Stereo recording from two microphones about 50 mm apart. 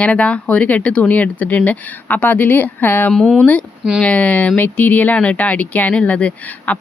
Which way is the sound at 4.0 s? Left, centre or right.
Left.